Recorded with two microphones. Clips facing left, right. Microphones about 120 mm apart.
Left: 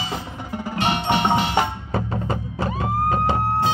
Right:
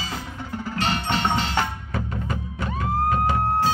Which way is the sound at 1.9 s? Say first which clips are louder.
Left 5 dB; 35° left (ahead or behind).